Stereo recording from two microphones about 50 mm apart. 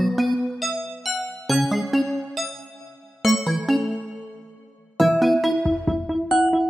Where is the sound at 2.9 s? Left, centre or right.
Left.